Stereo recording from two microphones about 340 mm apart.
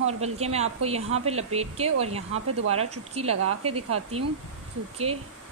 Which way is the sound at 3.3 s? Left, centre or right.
Right.